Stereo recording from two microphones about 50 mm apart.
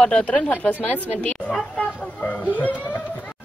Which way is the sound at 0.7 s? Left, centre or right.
Left.